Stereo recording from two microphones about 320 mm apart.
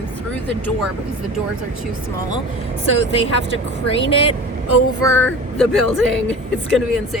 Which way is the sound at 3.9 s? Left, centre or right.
Centre.